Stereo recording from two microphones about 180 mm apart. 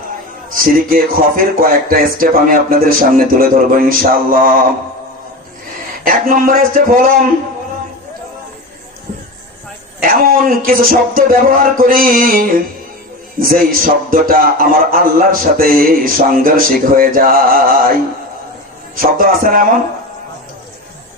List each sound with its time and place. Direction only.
0.5 s a man's voice: 50° right (ahead or behind)
6.1 s a man's voice: 50° right (ahead or behind)
10.0 s a man's voice: 55° right (ahead or behind)
18.9 s a man's voice: 50° right (ahead or behind)